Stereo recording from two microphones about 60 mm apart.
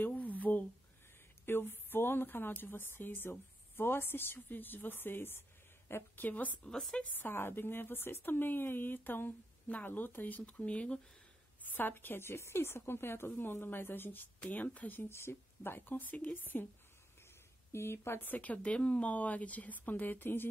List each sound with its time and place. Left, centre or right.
0.0 s a sound: left
1.4 s a woman's voice: left
6.2 s speech: left
7.2 s a woman's voice: left; by 11.0 s centre
11.7 s a woman's voice: left
15.0 s a woman's voice: left
17.7 s speech: left
18.3 s speech: left